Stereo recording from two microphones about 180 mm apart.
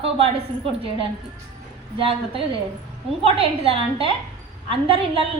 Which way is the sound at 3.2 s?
30° right (ahead or behind).